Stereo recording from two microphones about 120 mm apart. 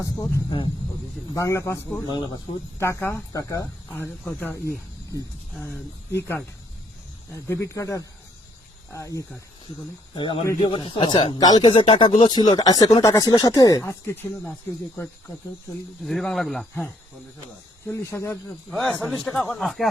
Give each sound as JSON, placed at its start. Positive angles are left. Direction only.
{"t": 0.0, "sound": "speech", "side_deg": 25}
{"t": 2.0, "sound": "speech", "side_deg": 40}
{"t": 2.7, "sound": "speech", "side_deg": 20}
{"t": 4.3, "sound": "speech", "side_deg": 15}
{"t": 6.1, "sound": "speech", "side_deg": 20}
{"t": 10.2, "sound": "speech", "side_deg": 40}
{"t": 16.0, "sound": "speech", "side_deg": 0}
{"t": 17.8, "sound": "speech", "side_deg": 25}
{"t": 18.8, "sound": "speech", "side_deg": 10}